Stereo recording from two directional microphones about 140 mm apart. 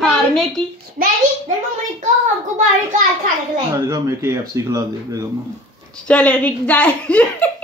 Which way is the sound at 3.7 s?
20° right (ahead or behind).